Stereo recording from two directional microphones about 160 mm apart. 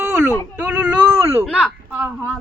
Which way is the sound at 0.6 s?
10° right (ahead or behind).